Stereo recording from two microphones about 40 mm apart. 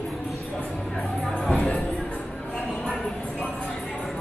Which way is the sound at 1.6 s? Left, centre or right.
Left.